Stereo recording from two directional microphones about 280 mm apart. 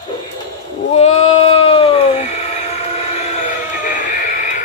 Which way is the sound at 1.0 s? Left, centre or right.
Left.